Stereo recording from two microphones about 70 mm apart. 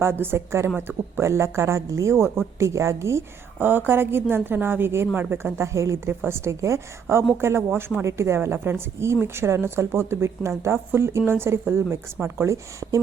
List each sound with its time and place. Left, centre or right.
0.0 s speech: right
3.6 s speech: right